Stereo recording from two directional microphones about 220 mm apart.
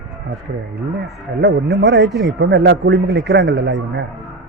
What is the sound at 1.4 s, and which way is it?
A man's voice, 50° right (ahead or behind).